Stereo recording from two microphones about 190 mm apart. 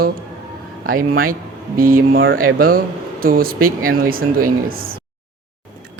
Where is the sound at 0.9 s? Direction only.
50° right (ahead or behind).